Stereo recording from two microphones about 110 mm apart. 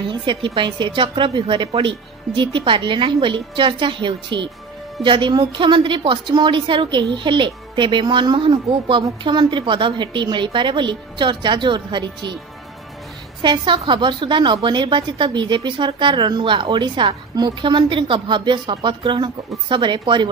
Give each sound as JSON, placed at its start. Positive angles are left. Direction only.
{"t": 0.0, "sound": "a woman's voice", "side_deg": -50}
{"t": 13.4, "sound": "a woman's voice", "side_deg": -45}